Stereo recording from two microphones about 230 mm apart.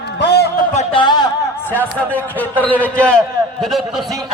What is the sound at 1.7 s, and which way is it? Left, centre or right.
A man's voice, centre.